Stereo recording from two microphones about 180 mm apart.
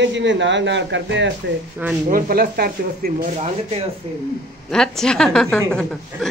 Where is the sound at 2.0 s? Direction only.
50° right (ahead or behind).